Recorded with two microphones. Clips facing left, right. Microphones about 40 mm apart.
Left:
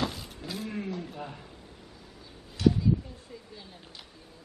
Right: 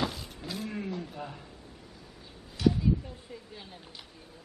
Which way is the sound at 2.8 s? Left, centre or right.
Centre.